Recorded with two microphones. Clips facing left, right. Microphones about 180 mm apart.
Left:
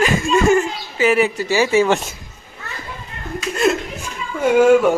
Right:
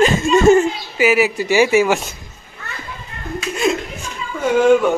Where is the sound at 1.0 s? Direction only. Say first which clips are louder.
Right 1 dB; 10° right (ahead or behind).